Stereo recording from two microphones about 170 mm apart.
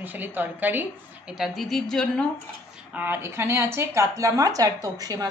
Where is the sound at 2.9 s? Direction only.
10° right (ahead or behind).